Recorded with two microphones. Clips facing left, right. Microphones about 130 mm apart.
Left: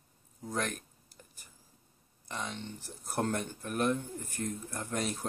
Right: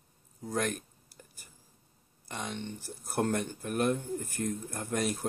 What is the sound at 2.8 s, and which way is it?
Speech, centre (ahead or behind).